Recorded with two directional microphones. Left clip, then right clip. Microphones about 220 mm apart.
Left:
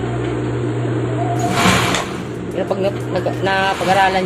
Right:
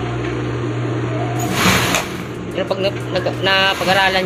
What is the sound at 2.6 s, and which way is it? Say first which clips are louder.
Speech: left 1 dB; 10° left (ahead or behind).